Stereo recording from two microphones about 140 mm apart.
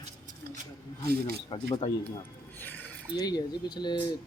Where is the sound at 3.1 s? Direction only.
25° left (ahead or behind).